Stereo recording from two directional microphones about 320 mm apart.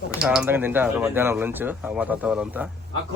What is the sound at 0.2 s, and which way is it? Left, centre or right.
Speech, centre.